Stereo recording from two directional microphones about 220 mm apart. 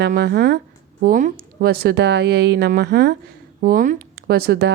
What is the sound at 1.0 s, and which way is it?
Speech, 35° right (ahead or behind).